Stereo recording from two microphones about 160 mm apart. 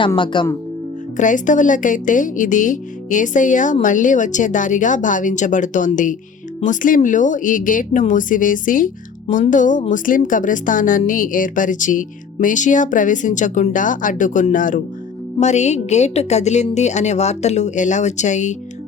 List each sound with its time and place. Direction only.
0.3 s speech: 30° left (ahead or behind)
1.1 s a woman's voice: 50° left (ahead or behind)